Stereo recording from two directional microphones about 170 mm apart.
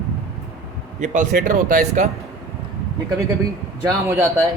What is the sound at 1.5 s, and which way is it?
Speech, 45° right (ahead or behind).